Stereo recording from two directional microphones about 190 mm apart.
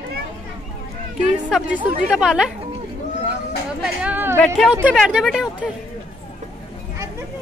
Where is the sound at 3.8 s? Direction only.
10° right (ahead or behind).